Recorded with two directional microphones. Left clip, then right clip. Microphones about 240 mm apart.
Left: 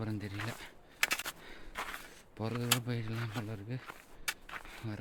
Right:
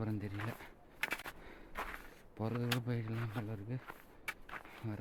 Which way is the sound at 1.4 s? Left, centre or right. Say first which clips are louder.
Left 3 dB; centre.